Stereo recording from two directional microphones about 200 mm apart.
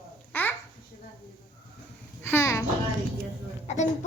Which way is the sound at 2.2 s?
10° left (ahead or behind).